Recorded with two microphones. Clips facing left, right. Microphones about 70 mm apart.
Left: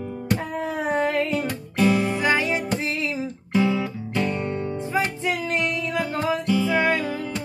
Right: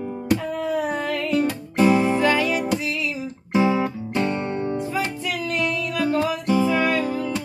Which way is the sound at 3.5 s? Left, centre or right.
Centre.